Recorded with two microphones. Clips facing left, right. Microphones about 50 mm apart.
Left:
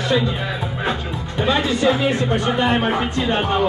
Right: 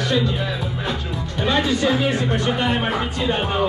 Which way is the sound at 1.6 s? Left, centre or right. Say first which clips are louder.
Left 2 dB; left.